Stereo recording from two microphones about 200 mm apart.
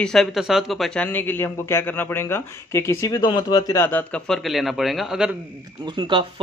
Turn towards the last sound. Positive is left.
turn(degrees=-25)  # may be behind; listen again after turning